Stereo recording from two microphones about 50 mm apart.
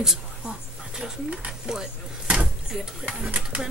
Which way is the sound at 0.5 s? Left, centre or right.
Centre.